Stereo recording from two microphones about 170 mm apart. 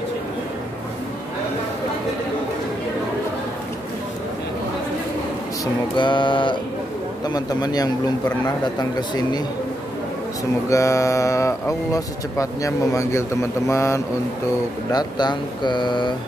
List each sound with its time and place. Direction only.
5.9 s speech: 30° left (ahead or behind)
10.7 s speech: 15° left (ahead or behind)